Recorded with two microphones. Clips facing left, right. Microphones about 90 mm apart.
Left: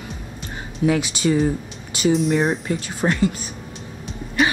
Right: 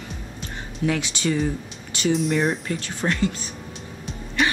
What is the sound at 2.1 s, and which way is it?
Speech, centre (ahead or behind).